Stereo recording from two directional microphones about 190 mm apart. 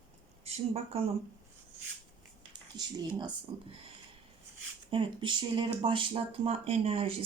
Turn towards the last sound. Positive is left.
turn(degrees=-30)  # may be behind; listen again after turning